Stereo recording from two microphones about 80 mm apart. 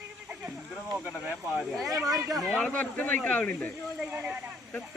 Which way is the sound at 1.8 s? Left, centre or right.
Right.